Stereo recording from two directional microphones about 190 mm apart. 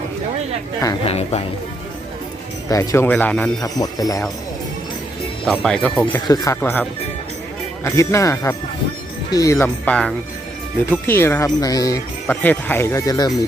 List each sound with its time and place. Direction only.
1.0 s a woman's voice: 30° left (ahead or behind)
2.6 s speech: 15° left (ahead or behind)
3.6 s a man's voice: 20° left (ahead or behind)
5.5 s speech: 5° left (ahead or behind)
6.2 s speech: 20° left (ahead or behind)
7.9 s speech: 15° left (ahead or behind)